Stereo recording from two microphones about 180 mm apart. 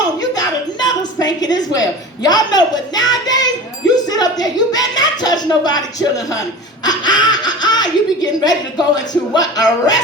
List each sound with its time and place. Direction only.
0.8 s a woman's voice: 20° left (ahead or behind)